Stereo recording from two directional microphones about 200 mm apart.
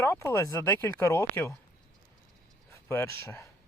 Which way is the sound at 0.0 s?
15° left (ahead or behind).